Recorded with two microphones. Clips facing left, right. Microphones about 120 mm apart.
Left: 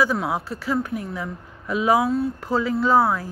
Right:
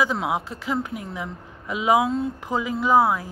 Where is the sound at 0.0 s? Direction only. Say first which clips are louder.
Left 1 dB; 20° right (ahead or behind).